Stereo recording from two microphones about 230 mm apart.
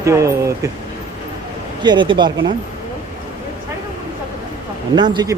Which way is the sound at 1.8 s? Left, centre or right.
Centre.